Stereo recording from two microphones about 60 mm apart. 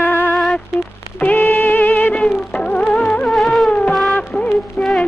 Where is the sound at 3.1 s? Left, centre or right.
Centre.